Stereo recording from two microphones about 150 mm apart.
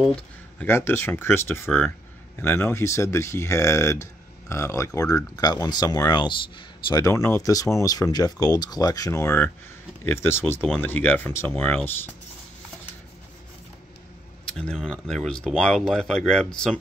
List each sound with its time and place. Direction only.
0.0 s a sound: 5° left (ahead or behind)
0.7 s speech: 15° left (ahead or behind)
14.4 s speech: 5° left (ahead or behind)